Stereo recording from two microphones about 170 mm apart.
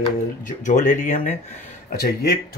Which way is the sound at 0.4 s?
45° left (ahead or behind).